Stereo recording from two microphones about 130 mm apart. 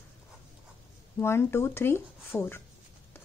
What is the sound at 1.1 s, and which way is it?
Speech, 20° left (ahead or behind).